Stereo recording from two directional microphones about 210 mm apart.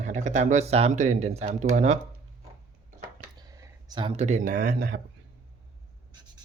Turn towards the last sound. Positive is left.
turn(degrees=-45)  # may be behind; listen again after turning